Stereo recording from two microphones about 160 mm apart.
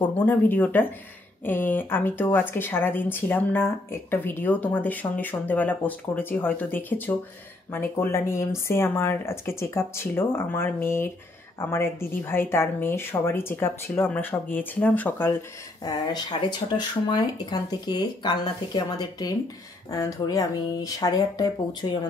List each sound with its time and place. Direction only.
0.2 s speech: 10° left (ahead or behind)
15.8 s speech: 25° left (ahead or behind)